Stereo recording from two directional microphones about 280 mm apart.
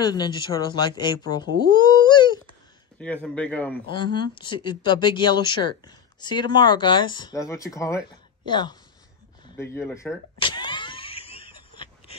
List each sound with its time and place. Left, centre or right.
0.0 s speech: centre
3.0 s speech: centre
3.9 s speech: centre
10.4 s power windows: centre